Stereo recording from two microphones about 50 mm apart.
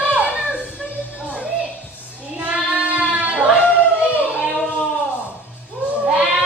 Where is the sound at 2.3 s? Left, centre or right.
Right.